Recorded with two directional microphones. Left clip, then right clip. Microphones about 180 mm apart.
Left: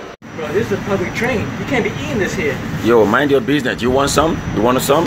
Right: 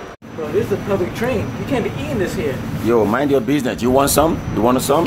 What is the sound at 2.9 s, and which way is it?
Speech, centre (ahead or behind).